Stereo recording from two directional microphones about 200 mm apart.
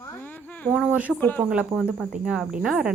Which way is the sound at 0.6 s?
Centre (ahead or behind).